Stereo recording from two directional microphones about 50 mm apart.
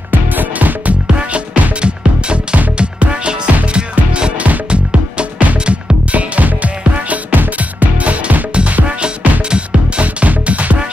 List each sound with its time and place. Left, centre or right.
0.1 s music: right
1.0 s music: right
10.0 s music: right